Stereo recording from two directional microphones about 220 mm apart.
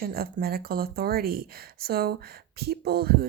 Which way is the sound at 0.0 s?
40° right (ahead or behind).